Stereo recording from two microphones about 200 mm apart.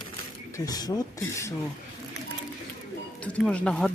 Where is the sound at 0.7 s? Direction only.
20° left (ahead or behind).